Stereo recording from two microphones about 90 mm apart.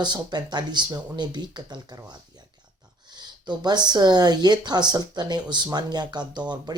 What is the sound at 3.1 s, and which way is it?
Speech, 55° right (ahead or behind).